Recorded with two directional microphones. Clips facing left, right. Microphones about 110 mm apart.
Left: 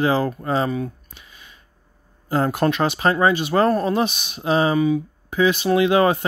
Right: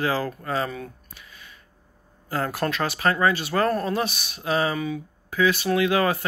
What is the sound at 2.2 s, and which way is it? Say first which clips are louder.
Speech: left 7 dB; 20° left (ahead or behind).